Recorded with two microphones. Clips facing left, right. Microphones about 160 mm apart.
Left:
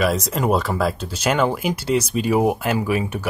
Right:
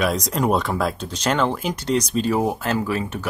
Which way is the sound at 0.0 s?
Centre (ahead or behind).